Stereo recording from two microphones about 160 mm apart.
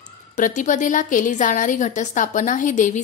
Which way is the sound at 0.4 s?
50° left (ahead or behind).